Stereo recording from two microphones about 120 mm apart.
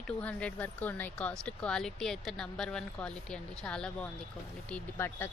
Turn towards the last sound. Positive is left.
turn(degrees=20)  # may be behind; listen again after turning